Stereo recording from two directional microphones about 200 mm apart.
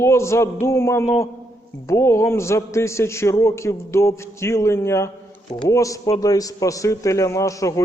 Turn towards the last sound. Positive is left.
turn(degrees=15)  # may be behind; listen again after turning